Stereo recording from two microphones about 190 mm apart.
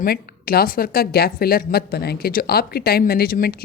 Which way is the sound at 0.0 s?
50° left (ahead or behind).